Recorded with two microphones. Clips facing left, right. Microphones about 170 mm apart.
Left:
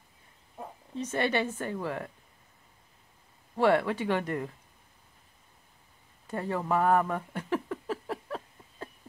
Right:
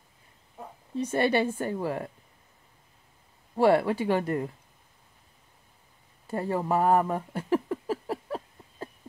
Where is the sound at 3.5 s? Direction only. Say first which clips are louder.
Right 3 dB; 35° right (ahead or behind).